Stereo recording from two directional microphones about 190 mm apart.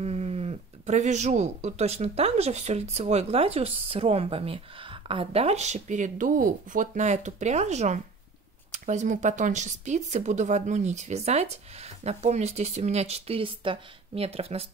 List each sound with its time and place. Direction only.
0.0 s speech: 35° right (ahead or behind)